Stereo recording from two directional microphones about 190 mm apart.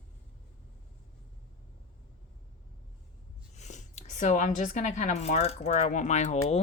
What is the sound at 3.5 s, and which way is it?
Speech, 40° left (ahead or behind).